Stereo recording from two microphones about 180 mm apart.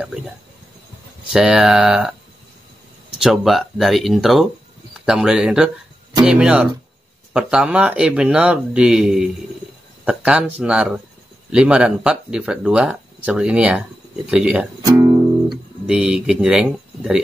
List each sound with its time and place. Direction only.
1.3 s speech: 5° right (ahead or behind)
3.2 s speech: centre (ahead or behind)
14.9 s music: 20° right (ahead or behind)
15.9 s speech: 5° right (ahead or behind)